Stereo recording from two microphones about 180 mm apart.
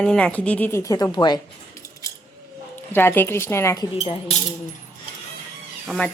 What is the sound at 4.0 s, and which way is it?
Speech, 35° left (ahead or behind).